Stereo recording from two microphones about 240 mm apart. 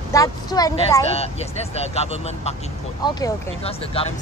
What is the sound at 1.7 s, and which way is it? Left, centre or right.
Speech, left.